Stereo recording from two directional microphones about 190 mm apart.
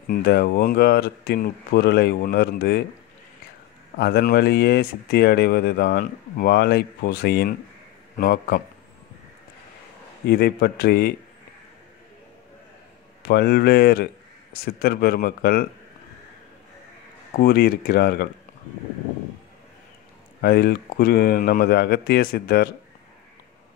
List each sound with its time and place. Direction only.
0.1 s speech: 55° left (ahead or behind)
4.0 s speech: 55° left (ahead or behind)
10.2 s speech: 55° left (ahead or behind)
13.3 s speech: 55° left (ahead or behind)
17.4 s speech: 55° left (ahead or behind)
20.4 s speech: 55° left (ahead or behind)